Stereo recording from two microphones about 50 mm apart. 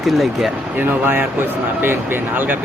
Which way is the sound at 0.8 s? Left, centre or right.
Right.